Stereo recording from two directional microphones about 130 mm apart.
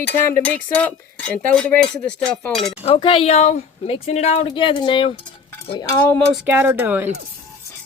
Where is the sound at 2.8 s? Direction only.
45° left (ahead or behind).